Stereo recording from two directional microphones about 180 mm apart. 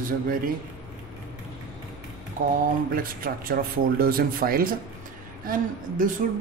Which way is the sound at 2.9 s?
50° right (ahead or behind).